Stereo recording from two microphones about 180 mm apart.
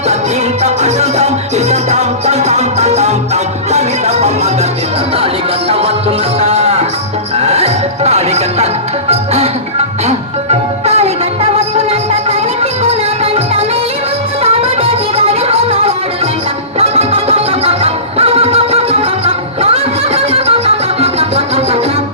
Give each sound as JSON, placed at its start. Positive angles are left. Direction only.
{"t": 0.6, "sound": "music", "side_deg": -35}
{"t": 10.8, "sound": "music", "side_deg": -35}